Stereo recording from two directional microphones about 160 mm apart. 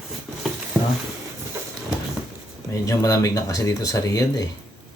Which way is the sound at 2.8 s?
20° left (ahead or behind).